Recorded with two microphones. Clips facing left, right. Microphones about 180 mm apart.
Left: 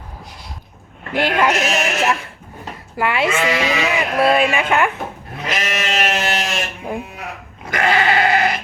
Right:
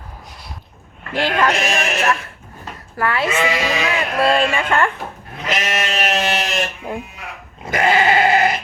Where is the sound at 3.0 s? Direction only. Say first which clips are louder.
Left 1 dB; 15° left (ahead or behind).